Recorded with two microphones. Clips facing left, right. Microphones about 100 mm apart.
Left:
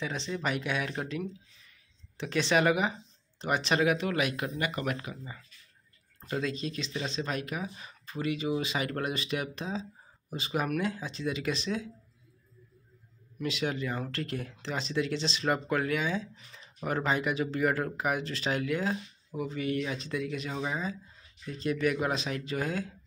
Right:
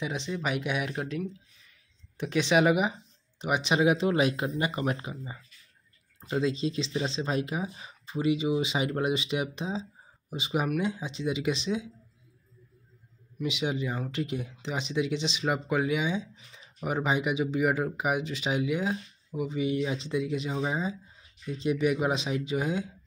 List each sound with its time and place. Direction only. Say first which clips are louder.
0.0 s speech: right 1 dB; 15° right (ahead or behind)
13.4 s speech: right 2 dB; 15° right (ahead or behind)